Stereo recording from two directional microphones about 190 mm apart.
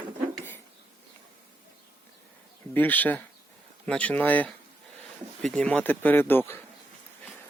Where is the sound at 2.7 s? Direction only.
10° left (ahead or behind).